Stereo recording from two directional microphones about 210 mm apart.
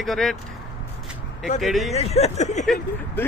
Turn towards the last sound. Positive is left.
turn(degrees=0)  # may be behind; listen again after turning